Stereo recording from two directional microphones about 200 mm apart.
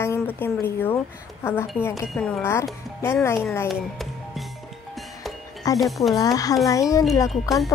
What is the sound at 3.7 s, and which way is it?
Music, centre (ahead or behind).